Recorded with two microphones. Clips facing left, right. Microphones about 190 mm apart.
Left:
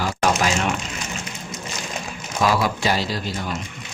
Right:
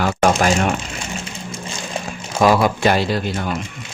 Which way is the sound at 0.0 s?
60° right (ahead or behind).